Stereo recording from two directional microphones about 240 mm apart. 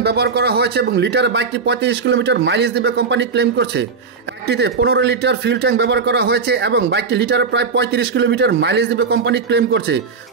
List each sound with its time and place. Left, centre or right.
0.0 s speech: right